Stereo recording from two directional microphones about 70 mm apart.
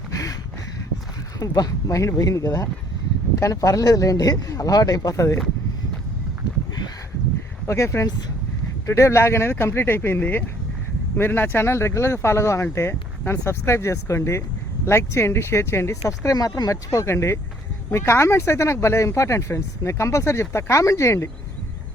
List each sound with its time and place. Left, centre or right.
0.1 s a sound: left
1.4 s speech: left
5.1 s speech: left
7.7 s speech: left
16.0 s speech: left